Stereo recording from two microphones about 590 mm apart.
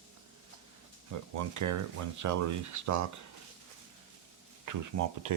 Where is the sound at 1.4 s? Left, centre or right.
Right.